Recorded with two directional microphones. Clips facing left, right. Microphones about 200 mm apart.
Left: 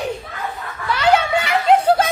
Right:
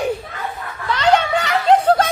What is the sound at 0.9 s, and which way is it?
Snicker, 10° left (ahead or behind).